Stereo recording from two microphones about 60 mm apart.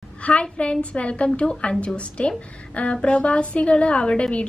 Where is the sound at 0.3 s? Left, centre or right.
Centre.